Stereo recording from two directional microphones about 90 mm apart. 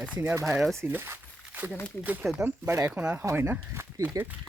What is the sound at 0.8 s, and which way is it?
Speech, 25° right (ahead or behind).